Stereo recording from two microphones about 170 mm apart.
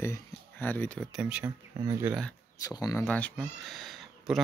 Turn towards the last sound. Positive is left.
turn(degrees=0)  # may be behind; listen again after turning